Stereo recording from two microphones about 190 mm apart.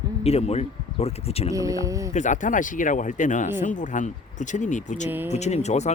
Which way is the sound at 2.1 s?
40° left (ahead or behind).